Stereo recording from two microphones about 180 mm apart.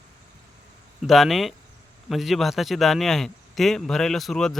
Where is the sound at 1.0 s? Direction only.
Centre (ahead or behind).